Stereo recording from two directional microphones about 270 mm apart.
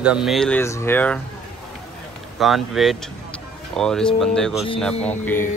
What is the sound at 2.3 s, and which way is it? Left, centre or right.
Speech, centre.